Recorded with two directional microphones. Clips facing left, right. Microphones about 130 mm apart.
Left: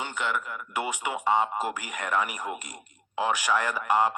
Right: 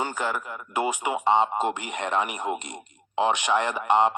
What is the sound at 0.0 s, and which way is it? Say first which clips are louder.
A man's voice: right 3 dB; 40° right (ahead or behind).